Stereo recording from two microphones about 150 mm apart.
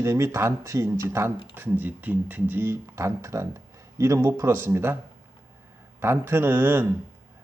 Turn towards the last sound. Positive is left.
turn(degrees=-15)  # may be behind; listen again after turning